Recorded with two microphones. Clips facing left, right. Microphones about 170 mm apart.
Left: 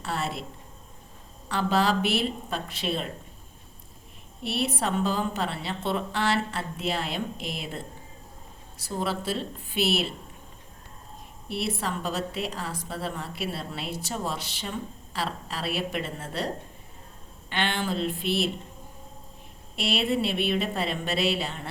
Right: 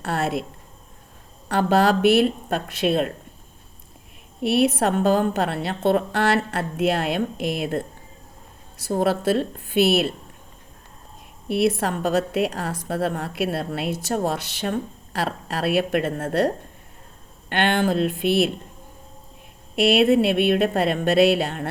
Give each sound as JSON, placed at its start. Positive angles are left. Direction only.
{"t": 0.0, "sound": "a woman's voice", "side_deg": -55}
{"t": 1.5, "sound": "a woman's voice", "side_deg": -60}
{"t": 4.4, "sound": "a woman's voice", "side_deg": -75}
{"t": 4.8, "sound": "a woman's voice", "side_deg": -55}
{"t": 8.9, "sound": "a woman's voice", "side_deg": -55}
{"t": 11.4, "sound": "a woman's voice", "side_deg": -70}
{"t": 17.5, "sound": "a woman's voice", "side_deg": -55}
{"t": 19.7, "sound": "a woman's voice", "side_deg": -65}